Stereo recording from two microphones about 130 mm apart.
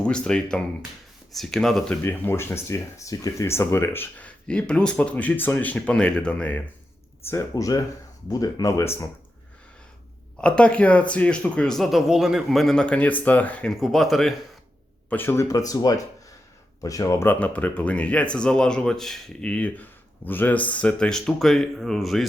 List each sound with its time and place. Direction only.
0.0 s speech: 5° left (ahead or behind)
2.0 s speech: 15° left (ahead or behind)
7.3 s speech: 25° left (ahead or behind)
10.4 s speech: 10° left (ahead or behind)
15.1 s speech: 15° left (ahead or behind); by 22.3 s centre (ahead or behind)